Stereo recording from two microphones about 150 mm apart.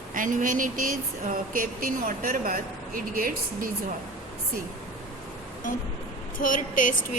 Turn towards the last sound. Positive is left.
turn(degrees=60)  # may be behind; listen again after turning